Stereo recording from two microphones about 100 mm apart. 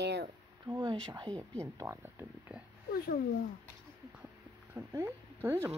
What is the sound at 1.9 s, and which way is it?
Speech, 25° right (ahead or behind).